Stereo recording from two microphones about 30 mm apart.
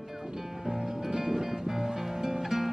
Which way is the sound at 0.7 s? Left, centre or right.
Centre.